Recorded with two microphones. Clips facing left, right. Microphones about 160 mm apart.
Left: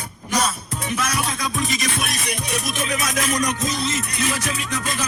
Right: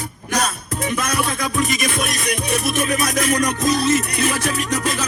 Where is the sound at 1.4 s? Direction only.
60° right (ahead or behind).